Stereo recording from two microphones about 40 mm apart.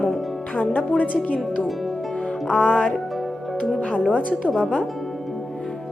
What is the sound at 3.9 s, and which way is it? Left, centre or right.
Speech, right.